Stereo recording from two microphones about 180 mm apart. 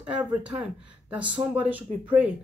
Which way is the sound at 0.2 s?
10° right (ahead or behind).